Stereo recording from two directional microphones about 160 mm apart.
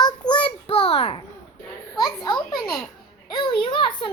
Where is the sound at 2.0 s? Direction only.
25° left (ahead or behind).